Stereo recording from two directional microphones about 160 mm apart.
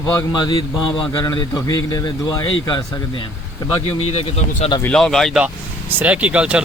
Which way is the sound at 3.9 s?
40° left (ahead or behind).